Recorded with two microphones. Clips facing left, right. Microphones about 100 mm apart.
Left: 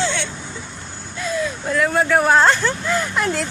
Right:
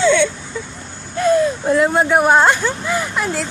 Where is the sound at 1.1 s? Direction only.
50° right (ahead or behind).